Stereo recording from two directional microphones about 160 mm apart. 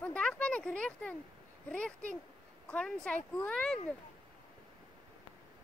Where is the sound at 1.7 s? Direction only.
5° left (ahead or behind).